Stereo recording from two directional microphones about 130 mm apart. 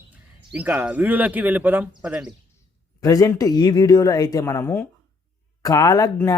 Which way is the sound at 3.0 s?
30° left (ahead or behind).